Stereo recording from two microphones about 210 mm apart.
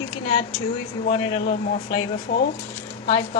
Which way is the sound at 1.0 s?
30° left (ahead or behind).